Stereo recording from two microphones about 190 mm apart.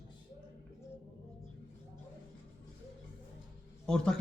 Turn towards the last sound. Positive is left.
turn(degrees=5)  # may be behind; listen again after turning